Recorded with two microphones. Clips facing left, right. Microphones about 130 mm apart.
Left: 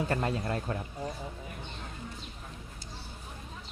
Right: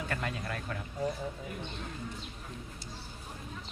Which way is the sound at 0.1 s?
30° left (ahead or behind).